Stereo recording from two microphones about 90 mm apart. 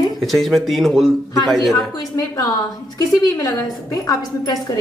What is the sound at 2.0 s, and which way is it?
A woman's voice, 45° left (ahead or behind).